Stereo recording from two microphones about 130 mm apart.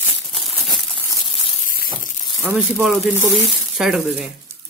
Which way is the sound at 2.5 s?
Centre (ahead or behind).